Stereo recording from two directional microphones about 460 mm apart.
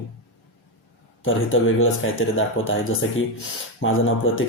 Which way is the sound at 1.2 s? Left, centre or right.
Left.